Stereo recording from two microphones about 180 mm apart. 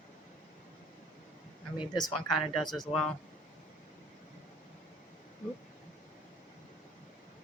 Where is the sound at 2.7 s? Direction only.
Centre (ahead or behind).